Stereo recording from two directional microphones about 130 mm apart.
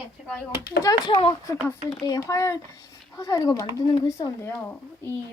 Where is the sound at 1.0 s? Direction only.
40° left (ahead or behind).